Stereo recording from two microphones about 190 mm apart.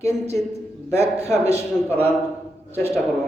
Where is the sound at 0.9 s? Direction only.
35° right (ahead or behind).